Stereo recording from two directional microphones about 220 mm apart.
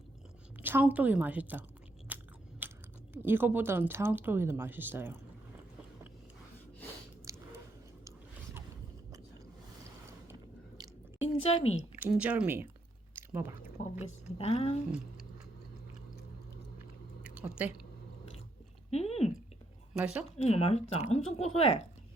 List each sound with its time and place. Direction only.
0.6 s a woman's voice: 10° right (ahead or behind)
2.1 s biting: 10° right (ahead or behind)
2.6 s speech: 10° right (ahead or behind)
7.3 s a sound: 15° right (ahead or behind)
10.8 s chewing: 20° right (ahead or behind)
11.4 s speech: 30° left (ahead or behind)
11.8 s a woman's voice: 5° right (ahead or behind)
14.3 s speech: 30° left (ahead or behind)
17.2 s a sound: 5° right (ahead or behind)
18.9 s a sound: 30° left (ahead or behind)
19.9 s speech: 5° right (ahead or behind)
20.4 s speech: 30° left (ahead or behind)